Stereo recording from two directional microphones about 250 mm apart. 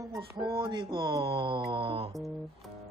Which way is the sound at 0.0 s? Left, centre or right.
Centre.